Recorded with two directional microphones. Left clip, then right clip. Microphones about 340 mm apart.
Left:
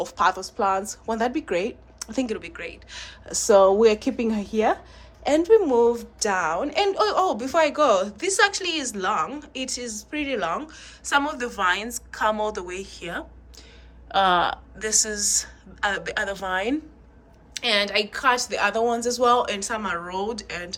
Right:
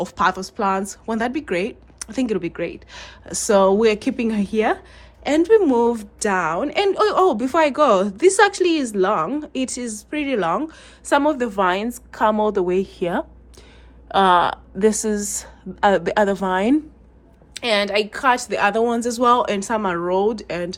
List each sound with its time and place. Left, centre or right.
0.0 s a woman's voice: right